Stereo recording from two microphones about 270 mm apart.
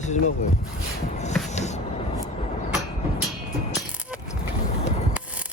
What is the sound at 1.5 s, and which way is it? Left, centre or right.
Music, left.